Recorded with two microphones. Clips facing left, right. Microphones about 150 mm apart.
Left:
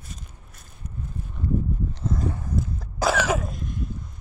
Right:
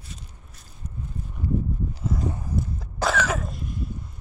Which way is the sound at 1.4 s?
5° right (ahead or behind).